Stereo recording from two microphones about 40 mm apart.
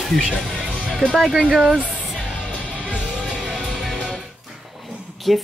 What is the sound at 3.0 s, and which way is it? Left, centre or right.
Music, right.